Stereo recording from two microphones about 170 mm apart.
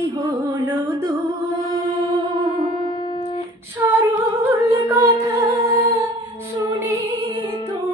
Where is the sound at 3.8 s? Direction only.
20° right (ahead or behind).